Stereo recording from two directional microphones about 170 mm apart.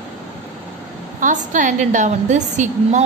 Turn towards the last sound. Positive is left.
turn(degrees=-45)  # may be behind; listen again after turning